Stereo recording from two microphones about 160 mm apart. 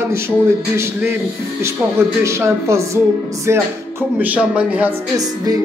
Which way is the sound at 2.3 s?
15° right (ahead or behind).